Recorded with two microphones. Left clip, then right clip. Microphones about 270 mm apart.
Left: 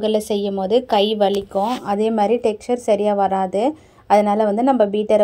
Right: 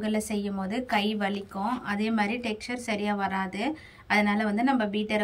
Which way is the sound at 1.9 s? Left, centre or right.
Centre.